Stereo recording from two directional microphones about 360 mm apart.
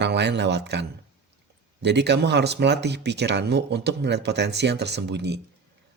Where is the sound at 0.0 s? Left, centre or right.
Right.